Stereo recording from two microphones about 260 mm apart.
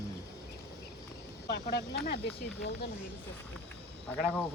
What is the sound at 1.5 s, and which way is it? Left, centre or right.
Speech, left.